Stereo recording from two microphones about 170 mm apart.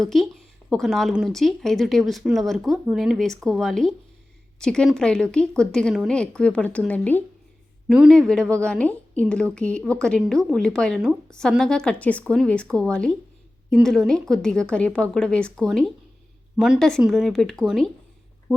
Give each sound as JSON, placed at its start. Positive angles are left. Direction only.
{"t": 0.0, "sound": "a woman's voice", "side_deg": 0}
{"t": 7.9, "sound": "a woman's voice", "side_deg": 0}